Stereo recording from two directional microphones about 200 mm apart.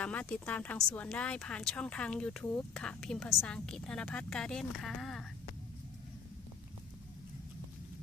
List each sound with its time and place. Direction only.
0.0 s speech: 5° left (ahead or behind)